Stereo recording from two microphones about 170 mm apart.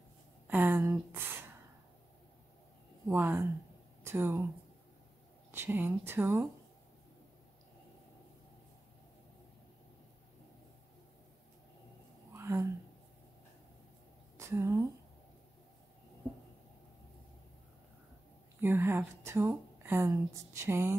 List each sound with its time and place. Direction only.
0.5 s a sound: 10° right (ahead or behind)
3.1 s a woman's voice: 15° right (ahead or behind)
5.5 s a woman's voice: 15° right (ahead or behind)
12.4 s a sound: 15° right (ahead or behind)
14.3 s a woman's voice: 15° right (ahead or behind)
18.6 s a woman's voice: 15° right (ahead or behind)